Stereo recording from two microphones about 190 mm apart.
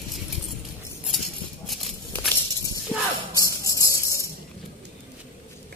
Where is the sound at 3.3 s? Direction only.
15° left (ahead or behind).